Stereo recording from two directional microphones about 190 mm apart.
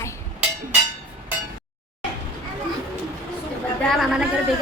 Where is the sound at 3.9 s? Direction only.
Centre (ahead or behind).